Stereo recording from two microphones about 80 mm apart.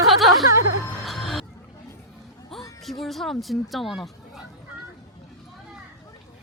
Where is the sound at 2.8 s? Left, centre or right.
Centre.